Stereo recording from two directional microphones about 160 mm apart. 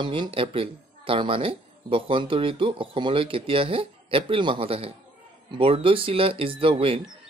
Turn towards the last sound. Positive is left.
turn(degrees=-35)  # may be behind; listen again after turning